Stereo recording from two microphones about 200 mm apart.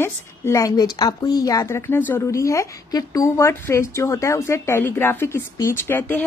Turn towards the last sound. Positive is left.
turn(degrees=10)  # may be behind; listen again after turning